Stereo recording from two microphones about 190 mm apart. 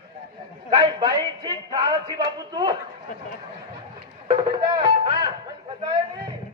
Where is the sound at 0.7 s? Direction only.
25° right (ahead or behind).